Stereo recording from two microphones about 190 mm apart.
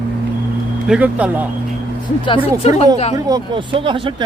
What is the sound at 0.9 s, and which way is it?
Speech, 5° right (ahead or behind).